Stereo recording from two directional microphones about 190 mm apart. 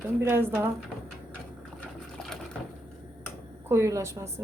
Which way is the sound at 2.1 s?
Centre (ahead or behind).